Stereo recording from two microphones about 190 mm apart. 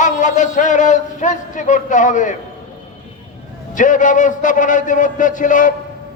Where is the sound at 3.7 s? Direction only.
45° left (ahead or behind).